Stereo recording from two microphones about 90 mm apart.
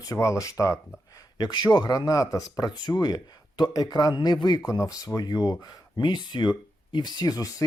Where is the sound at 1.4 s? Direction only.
50° left (ahead or behind).